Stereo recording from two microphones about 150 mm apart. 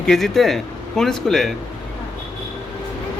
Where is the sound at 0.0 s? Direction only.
Centre (ahead or behind).